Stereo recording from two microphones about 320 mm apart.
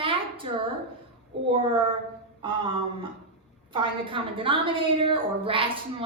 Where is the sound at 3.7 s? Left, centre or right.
Centre.